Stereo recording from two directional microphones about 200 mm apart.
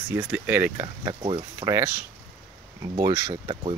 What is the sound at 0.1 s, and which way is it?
Speech, 10° right (ahead or behind).